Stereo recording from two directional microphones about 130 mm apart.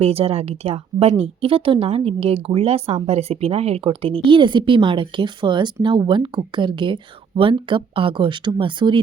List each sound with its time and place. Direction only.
0.0 s speech: 50° right (ahead or behind)